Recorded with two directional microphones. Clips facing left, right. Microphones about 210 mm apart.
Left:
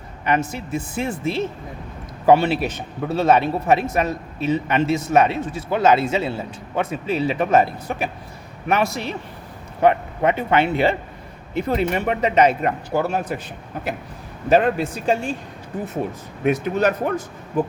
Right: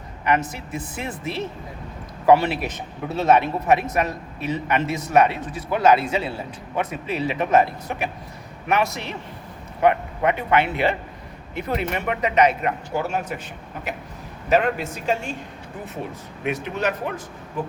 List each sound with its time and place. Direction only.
0.3 s a man's voice: 25° left (ahead or behind)
14.5 s speech: 35° left (ahead or behind)
16.4 s speech: 40° left (ahead or behind)